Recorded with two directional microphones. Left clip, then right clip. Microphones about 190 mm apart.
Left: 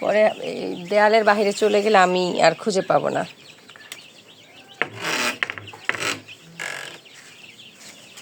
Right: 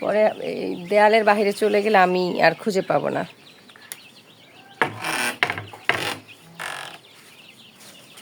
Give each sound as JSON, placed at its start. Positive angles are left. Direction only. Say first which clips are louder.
{"t": 0.0, "sound": "speech", "louder": "left 1 dB", "side_deg": -15}
{"t": 5.0, "sound": "filing", "louder": "even", "side_deg": 10}